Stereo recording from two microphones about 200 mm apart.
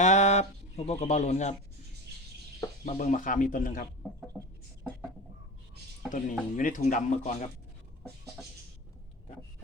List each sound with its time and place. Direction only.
0.0 s speech: 35° left (ahead or behind)
2.8 s speech: 40° left (ahead or behind)
4.4 s a sound: centre (ahead or behind)
6.1 s speech: 40° left (ahead or behind)